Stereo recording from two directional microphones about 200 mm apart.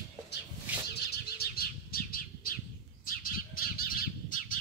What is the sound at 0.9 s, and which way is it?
Bird, 50° left (ahead or behind).